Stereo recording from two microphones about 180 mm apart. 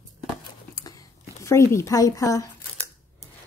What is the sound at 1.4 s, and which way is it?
Speech, 15° left (ahead or behind).